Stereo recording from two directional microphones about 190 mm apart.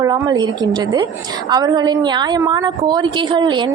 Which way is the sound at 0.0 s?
20° right (ahead or behind).